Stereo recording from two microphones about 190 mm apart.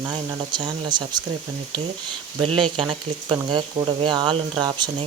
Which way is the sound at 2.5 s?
25° right (ahead or behind).